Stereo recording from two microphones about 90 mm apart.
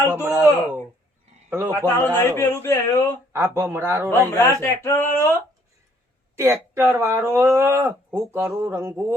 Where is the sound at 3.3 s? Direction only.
30° right (ahead or behind).